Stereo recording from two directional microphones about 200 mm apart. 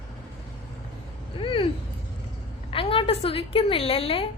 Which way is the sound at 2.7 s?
25° left (ahead or behind).